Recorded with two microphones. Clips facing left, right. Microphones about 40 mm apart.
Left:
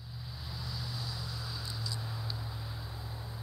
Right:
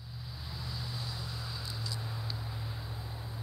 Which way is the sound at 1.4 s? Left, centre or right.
Centre.